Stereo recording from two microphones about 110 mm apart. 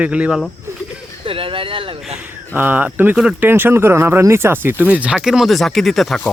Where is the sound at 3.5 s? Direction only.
20° right (ahead or behind).